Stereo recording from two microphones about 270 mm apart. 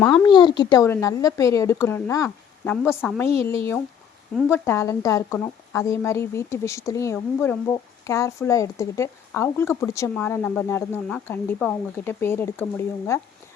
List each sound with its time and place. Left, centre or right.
0.0 s speech: centre
0.3 s speech: centre